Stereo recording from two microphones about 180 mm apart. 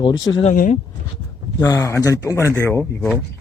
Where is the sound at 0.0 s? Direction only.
25° left (ahead or behind).